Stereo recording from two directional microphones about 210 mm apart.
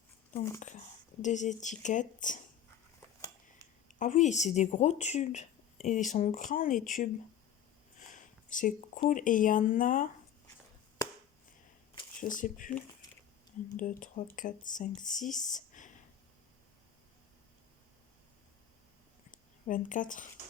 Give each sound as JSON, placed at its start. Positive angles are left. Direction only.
{"t": 1.2, "sound": "a woman's voice", "side_deg": 35}
{"t": 3.8, "sound": "a woman's voice", "side_deg": 35}
{"t": 7.9, "sound": "a sound", "side_deg": 40}
{"t": 9.0, "sound": "a woman's voice", "side_deg": 40}
{"t": 12.2, "sound": "a woman's voice", "side_deg": 40}
{"t": 13.7, "sound": "a woman's voice", "side_deg": 40}
{"t": 19.3, "sound": "a sound", "side_deg": 40}